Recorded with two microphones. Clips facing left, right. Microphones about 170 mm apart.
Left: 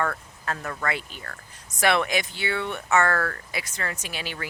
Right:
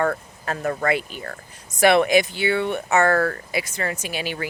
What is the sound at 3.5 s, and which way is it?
Speech, 10° right (ahead or behind).